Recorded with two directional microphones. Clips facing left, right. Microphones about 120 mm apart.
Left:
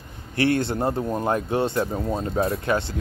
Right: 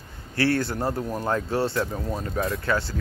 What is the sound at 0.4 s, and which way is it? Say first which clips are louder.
Speech: left 2 dB; 20° left (ahead or behind).